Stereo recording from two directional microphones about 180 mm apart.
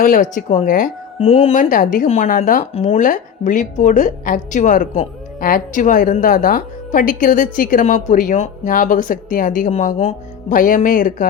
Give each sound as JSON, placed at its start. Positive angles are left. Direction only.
{"t": 0.0, "sound": "a woman's voice", "side_deg": 45}
{"t": 1.2, "sound": "a woman's voice", "side_deg": 35}
{"t": 2.7, "sound": "a woman's voice", "side_deg": 35}